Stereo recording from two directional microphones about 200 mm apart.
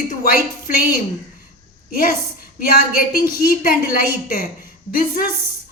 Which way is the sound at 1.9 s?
50° left (ahead or behind).